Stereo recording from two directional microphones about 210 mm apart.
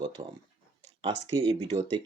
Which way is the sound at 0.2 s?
25° right (ahead or behind).